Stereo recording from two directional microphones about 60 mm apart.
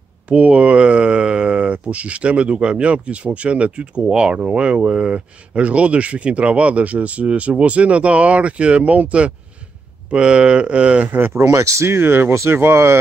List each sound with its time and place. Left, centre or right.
0.3 s speech: right
11.1 s speech: right
11.4 s speech: right
11.9 s speech: right